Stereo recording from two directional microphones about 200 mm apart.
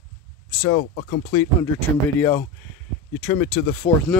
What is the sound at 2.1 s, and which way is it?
Speech, 10° left (ahead or behind).